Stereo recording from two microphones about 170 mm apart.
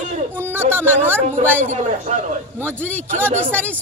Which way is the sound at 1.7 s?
45° right (ahead or behind).